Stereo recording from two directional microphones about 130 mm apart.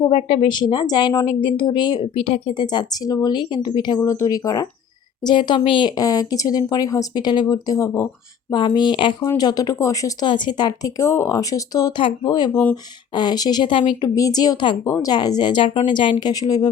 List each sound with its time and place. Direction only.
0.1 s a woman's voice: 45° left (ahead or behind)
4.0 s a woman's voice: 25° left (ahead or behind); by 5.9 s 40° left (ahead or behind)
6.0 s speech: 30° left (ahead or behind)
8.5 s a woman's voice: 35° left (ahead or behind)
10.2 s a woman's voice: 35° left (ahead or behind)
14.2 s a woman's voice: 30° left (ahead or behind)